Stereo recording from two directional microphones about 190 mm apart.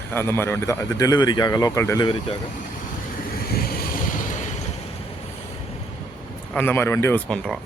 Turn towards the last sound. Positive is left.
turn(degrees=5)  # may be behind; listen again after turning